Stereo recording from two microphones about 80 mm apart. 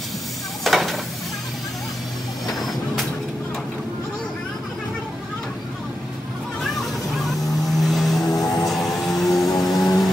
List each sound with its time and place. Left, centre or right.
0.7 s stir: centre
2.4 s vehicle: centre
6.6 s vehicle: centre
8.3 s music: left
8.6 s music: centre
9.5 s a sound: left